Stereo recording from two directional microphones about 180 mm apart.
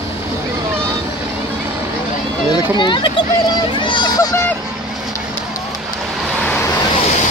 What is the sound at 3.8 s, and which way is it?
Vehicle, 25° left (ahead or behind).